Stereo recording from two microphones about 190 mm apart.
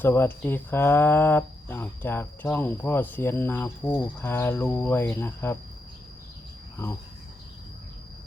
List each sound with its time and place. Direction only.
0.0 s speech: 10° left (ahead or behind)